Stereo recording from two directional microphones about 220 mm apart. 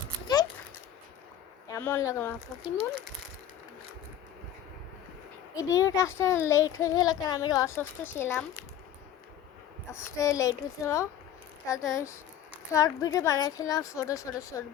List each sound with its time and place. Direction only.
1.6 s a woman's voice: 10° left (ahead or behind)
5.5 s a child's voice: 15° left (ahead or behind)
9.9 s a child's voice: 15° left (ahead or behind)